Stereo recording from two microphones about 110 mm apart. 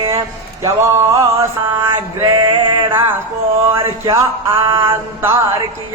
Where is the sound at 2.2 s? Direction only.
45° right (ahead or behind).